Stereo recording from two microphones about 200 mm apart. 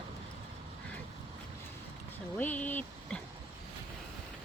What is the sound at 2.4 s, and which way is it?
Speech, 10° left (ahead or behind).